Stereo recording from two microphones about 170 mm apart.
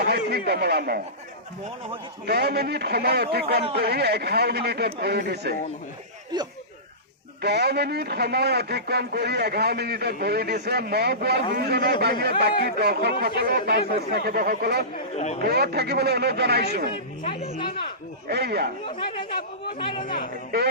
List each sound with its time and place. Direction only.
0.0 s speech: 75° right (ahead or behind)
2.2 s a man's voice: 70° right (ahead or behind)
7.4 s a man's voice: 75° right (ahead or behind)
15.1 s speech: 40° left (ahead or behind)
15.4 s a man's voice: 70° right (ahead or behind)
18.3 s a man's voice: 70° right (ahead or behind)
18.9 s speech: 30° left (ahead or behind)